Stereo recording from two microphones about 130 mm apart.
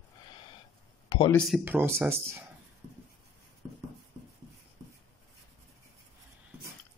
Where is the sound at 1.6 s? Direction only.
15° right (ahead or behind).